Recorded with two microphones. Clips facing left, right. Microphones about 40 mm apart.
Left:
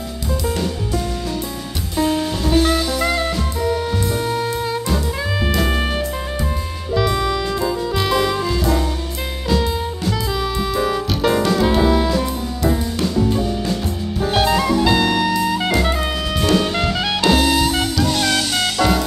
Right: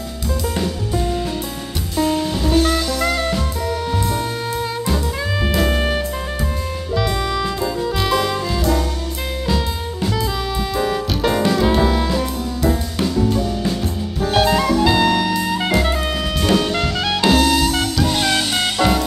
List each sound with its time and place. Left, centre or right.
2.0 s music: centre
7.0 s music: centre
14.3 s jazz: centre
17.2 s music: centre
18.0 s music: centre